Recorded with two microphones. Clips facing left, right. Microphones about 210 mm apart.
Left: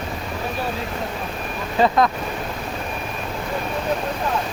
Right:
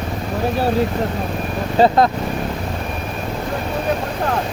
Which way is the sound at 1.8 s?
30° right (ahead or behind).